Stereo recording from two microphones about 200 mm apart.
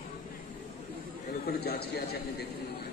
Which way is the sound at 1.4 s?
50° left (ahead or behind).